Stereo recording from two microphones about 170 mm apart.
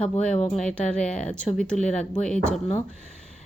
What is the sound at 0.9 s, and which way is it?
Speech, 5° left (ahead or behind).